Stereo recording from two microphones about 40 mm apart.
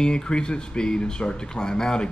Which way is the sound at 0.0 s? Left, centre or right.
Left.